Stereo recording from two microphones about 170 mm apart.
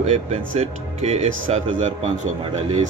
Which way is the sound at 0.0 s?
40° right (ahead or behind).